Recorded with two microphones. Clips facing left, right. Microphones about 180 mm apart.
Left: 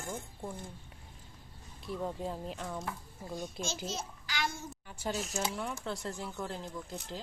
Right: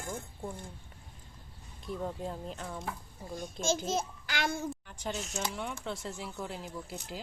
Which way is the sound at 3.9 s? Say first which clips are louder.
Right 7 dB; 55° right (ahead or behind).